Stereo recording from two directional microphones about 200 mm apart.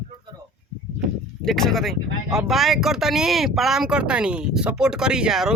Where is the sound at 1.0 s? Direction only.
Centre (ahead or behind).